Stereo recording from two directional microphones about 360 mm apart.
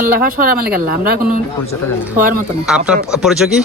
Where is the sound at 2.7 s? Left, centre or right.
Centre.